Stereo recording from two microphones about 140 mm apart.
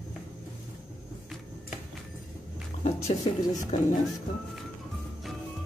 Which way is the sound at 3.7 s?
55° left (ahead or behind).